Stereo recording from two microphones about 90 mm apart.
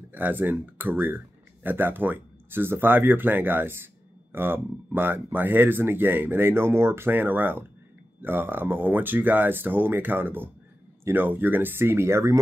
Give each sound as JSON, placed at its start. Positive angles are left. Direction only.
{"t": 0.1, "sound": "speech", "side_deg": -20}